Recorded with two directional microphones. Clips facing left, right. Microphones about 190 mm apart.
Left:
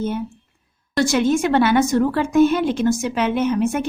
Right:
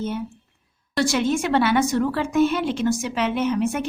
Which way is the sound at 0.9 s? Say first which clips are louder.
Left 4 dB; 45° left (ahead or behind).